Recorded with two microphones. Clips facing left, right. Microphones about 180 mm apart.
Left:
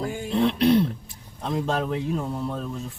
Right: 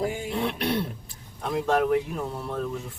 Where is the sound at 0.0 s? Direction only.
20° right (ahead or behind).